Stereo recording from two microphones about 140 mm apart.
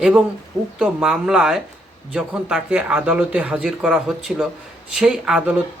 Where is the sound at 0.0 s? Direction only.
5° right (ahead or behind).